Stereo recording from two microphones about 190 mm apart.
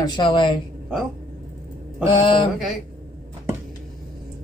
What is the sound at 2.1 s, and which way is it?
Speech, 25° left (ahead or behind).